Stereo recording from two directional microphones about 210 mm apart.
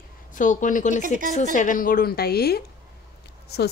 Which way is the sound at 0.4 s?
35° left (ahead or behind).